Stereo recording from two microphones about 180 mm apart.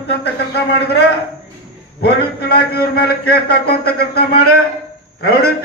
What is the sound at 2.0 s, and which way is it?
A man's voice, 60° left (ahead or behind).